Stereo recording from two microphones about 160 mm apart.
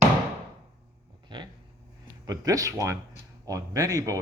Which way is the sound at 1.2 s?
30° right (ahead or behind).